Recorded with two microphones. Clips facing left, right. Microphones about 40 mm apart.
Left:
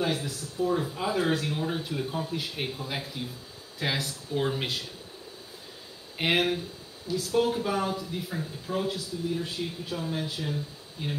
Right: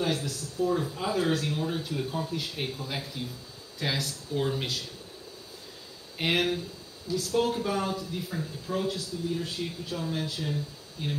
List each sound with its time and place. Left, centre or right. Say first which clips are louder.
0.0 s speech: even; centre
6.1 s speech: left 1 dB; centre
7.1 s speech: even; left
7.5 s speech: left 1 dB; centre
9.9 s speech: even; centre